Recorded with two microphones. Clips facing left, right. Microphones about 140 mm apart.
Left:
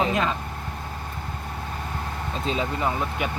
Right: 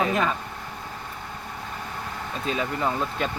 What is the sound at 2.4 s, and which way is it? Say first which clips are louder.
Speech: even; 20° left (ahead or behind).